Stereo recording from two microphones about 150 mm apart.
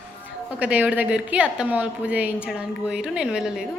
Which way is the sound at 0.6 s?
10° right (ahead or behind).